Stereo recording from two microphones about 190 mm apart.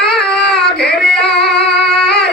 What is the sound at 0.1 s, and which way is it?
Child singing, 5° left (ahead or behind).